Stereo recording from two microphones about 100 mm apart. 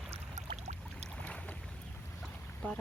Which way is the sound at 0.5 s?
90° right.